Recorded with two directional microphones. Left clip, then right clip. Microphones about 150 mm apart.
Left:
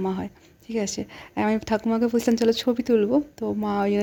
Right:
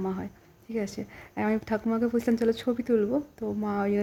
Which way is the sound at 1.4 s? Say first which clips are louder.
Left 5 dB; 15° left (ahead or behind).